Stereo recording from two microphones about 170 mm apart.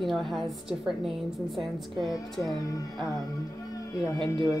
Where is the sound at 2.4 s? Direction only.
20° left (ahead or behind).